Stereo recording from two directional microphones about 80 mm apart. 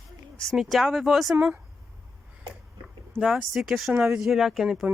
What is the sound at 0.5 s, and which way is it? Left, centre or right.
Speech, centre.